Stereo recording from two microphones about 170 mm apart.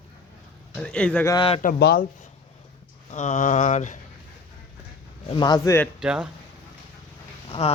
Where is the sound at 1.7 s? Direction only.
75° left (ahead or behind).